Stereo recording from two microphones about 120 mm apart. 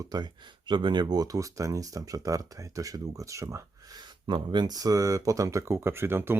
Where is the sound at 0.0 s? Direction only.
35° right (ahead or behind).